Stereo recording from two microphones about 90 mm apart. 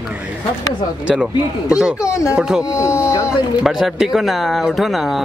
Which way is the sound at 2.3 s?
5° right (ahead or behind).